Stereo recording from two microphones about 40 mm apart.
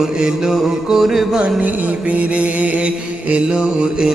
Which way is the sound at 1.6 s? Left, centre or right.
Right.